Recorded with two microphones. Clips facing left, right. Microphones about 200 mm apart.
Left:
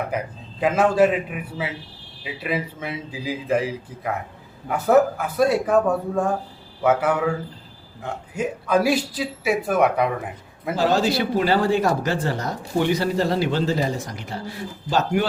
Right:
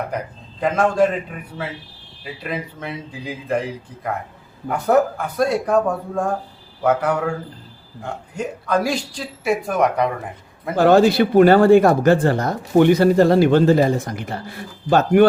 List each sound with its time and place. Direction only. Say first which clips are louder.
0.6 s a man's voice: even; 5° left (ahead or behind)
10.8 s speech: right 7 dB; 55° right (ahead or behind)